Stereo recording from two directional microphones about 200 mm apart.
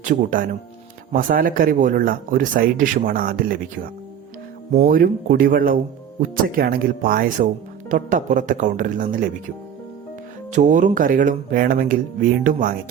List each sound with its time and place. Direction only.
0.0 s speech: 40° right (ahead or behind)
4.8 s speech: 45° right (ahead or behind)
10.5 s speech: 40° right (ahead or behind)